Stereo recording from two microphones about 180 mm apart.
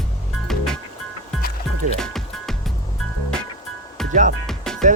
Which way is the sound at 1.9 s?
Centre (ahead or behind).